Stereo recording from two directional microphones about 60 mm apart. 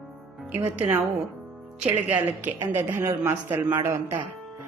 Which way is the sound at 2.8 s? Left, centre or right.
Right.